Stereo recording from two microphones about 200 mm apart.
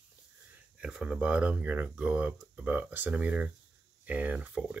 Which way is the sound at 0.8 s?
5° right (ahead or behind).